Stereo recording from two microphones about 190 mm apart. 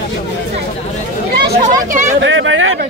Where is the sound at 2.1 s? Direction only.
75° right (ahead or behind).